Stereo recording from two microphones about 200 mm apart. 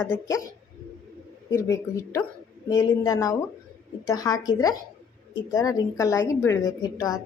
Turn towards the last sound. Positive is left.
turn(degrees=15)  # may be behind; listen again after turning